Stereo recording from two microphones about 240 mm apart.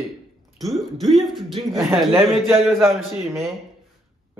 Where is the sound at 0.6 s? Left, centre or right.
Centre.